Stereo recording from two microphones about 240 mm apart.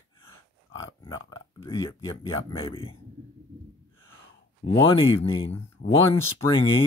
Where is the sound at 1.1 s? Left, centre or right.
Centre.